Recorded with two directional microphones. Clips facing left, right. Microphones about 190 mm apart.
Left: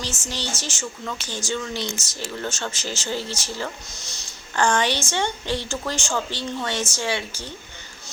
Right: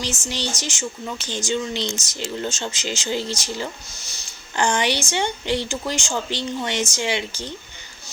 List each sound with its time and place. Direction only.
0.3 s speech: 15° right (ahead or behind)